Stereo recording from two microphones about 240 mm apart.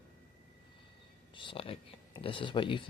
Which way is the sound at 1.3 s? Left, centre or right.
Left.